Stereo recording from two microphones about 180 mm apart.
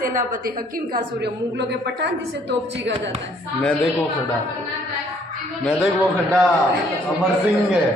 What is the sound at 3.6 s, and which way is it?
Speech, 5° left (ahead or behind).